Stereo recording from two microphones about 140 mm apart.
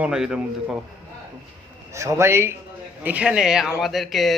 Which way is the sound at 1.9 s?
20° right (ahead or behind).